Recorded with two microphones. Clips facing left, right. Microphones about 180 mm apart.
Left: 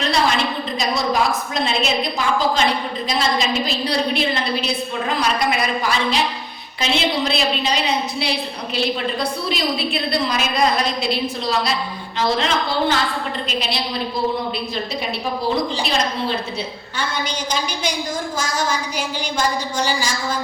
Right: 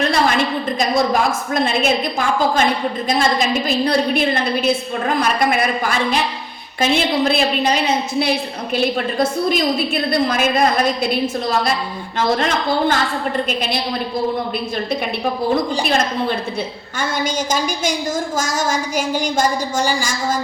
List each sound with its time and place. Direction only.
0.1 s a woman's voice: 50° right (ahead or behind)
15.5 s a woman's voice: 50° right (ahead or behind)